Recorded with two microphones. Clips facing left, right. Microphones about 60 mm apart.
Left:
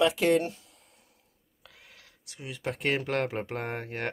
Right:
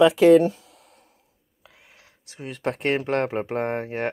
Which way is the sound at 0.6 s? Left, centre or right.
Right.